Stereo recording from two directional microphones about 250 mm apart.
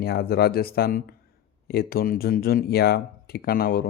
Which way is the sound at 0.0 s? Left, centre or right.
Left.